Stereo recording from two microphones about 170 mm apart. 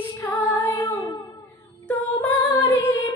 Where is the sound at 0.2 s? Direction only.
10° left (ahead or behind).